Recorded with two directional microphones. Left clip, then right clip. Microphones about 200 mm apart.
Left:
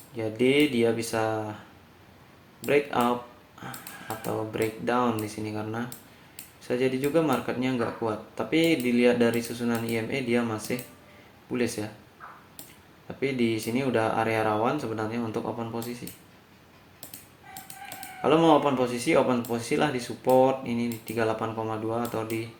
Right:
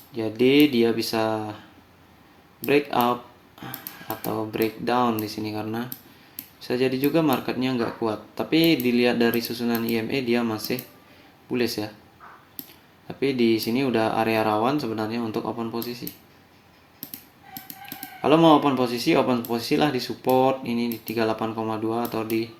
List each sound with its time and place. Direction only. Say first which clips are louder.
0.2 s speech: right 4 dB; 50° right (ahead or behind)
2.6 s speech: right 3 dB; 50° right (ahead or behind)
4.5 s speech: right 4 dB; 55° right (ahead or behind)
13.1 s speech: right 5 dB; 50° right (ahead or behind)
18.2 s speech: right 3 dB; 55° right (ahead or behind)